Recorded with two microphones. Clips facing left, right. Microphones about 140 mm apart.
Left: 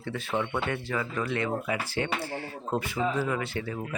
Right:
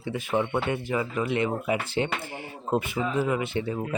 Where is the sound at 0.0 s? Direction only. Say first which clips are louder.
Right 4 dB; 15° right (ahead or behind).